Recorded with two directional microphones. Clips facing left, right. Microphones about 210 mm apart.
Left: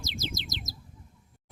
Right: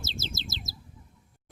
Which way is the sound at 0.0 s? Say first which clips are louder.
Left 2 dB; 15° left (ahead or behind).